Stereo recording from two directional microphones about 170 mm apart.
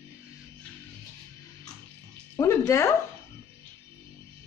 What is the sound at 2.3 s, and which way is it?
Speech, 15° left (ahead or behind).